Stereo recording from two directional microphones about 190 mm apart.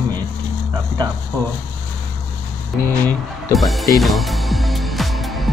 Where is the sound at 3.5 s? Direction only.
Centre (ahead or behind).